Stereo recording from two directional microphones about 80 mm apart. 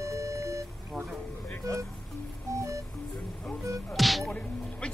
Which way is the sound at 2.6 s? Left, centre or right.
Right.